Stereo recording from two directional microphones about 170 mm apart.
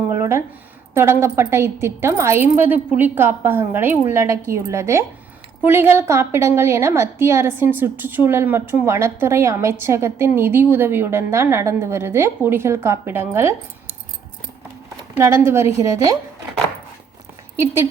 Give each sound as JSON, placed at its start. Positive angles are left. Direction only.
{"t": 0.1, "sound": "a sound", "side_deg": -15}
{"t": 0.9, "sound": "a woman's voice", "side_deg": -15}
{"t": 15.2, "sound": "a woman's voice", "side_deg": -15}